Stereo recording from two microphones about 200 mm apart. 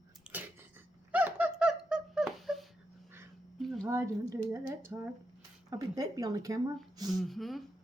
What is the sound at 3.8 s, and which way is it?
A woman's voice, 15° right (ahead or behind).